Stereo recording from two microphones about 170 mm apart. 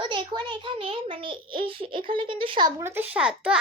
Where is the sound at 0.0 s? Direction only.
30° right (ahead or behind).